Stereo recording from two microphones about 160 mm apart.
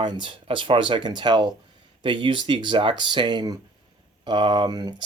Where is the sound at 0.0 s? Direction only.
30° right (ahead or behind).